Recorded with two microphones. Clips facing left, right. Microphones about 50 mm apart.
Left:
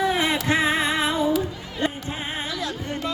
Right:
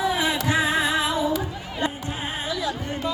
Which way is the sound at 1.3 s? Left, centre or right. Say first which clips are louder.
Left 2 dB; centre.